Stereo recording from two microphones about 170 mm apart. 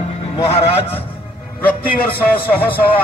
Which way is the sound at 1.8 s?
60° left (ahead or behind).